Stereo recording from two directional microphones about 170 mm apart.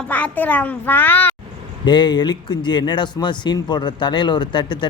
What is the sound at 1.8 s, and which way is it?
Speech, 25° left (ahead or behind).